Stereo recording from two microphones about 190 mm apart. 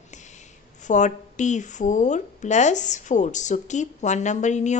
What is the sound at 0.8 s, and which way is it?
A woman's voice, 40° left (ahead or behind).